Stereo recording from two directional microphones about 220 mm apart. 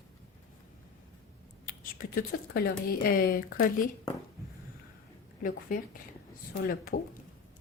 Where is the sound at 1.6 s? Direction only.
40° left (ahead or behind).